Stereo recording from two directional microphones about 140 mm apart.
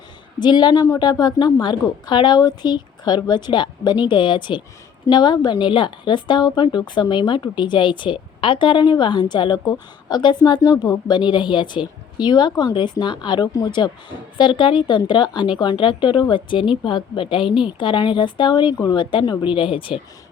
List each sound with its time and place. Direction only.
0.3 s a woman's voice: 30° left (ahead or behind)